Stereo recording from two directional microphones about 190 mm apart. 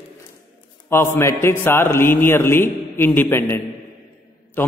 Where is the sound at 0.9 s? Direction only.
15° left (ahead or behind).